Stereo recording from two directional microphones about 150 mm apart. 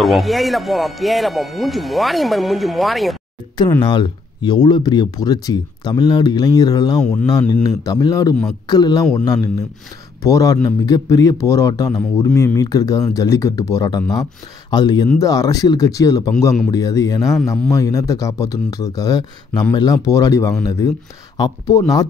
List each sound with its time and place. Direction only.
0.0 s speech: centre (ahead or behind)
3.9 s speech: 30° left (ahead or behind)
7.0 s speech: 5° left (ahead or behind)
7.2 s speech: 25° left (ahead or behind)